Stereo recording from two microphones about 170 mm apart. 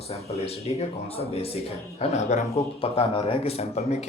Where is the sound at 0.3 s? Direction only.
35° left (ahead or behind).